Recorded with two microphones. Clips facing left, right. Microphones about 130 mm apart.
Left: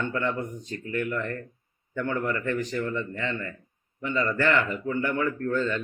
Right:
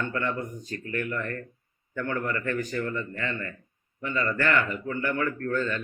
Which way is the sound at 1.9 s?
20° left (ahead or behind).